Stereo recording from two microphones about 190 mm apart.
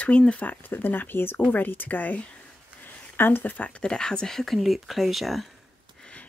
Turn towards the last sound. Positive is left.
turn(degrees=5)  # may be behind; listen again after turning